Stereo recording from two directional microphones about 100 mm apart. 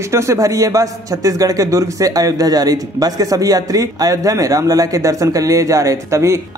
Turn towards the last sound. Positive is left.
turn(degrees=-30)  # may be behind; listen again after turning